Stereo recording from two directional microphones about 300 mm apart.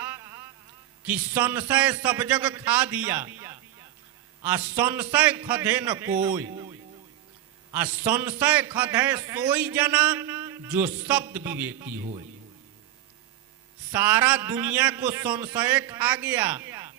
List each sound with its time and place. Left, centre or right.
0.0 s music: centre
1.0 s a man's voice: centre
7.7 s a man's voice: centre
13.9 s a man's voice: centre